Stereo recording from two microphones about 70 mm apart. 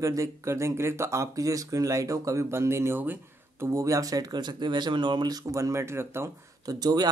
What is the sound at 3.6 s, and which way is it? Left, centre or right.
Speech, right.